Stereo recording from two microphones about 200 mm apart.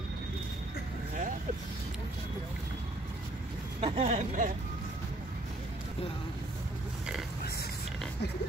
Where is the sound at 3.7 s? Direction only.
30° right (ahead or behind).